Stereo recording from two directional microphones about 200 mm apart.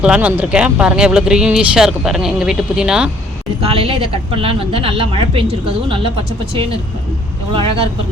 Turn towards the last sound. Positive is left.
turn(degrees=-25)  # may be behind; listen again after turning